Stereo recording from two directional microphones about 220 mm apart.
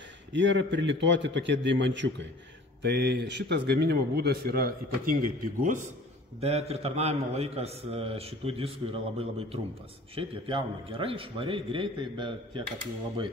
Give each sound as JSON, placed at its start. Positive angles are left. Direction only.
{"t": 0.3, "sound": "a man's voice", "side_deg": -55}